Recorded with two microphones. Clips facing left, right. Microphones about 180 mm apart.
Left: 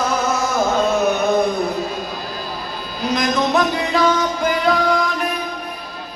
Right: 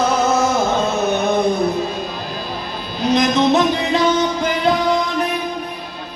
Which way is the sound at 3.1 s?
25° right (ahead or behind).